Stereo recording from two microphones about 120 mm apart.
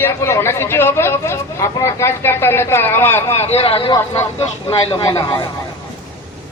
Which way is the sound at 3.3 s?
60° left (ahead or behind).